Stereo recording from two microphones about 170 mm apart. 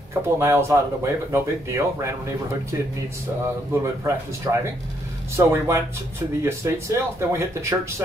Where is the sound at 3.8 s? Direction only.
15° right (ahead or behind).